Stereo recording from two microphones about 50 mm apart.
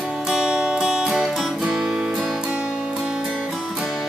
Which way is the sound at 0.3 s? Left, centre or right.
Centre.